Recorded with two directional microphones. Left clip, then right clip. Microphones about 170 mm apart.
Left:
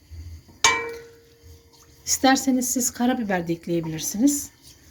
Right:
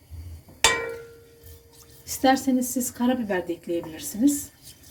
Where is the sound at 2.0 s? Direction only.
50° left (ahead or behind).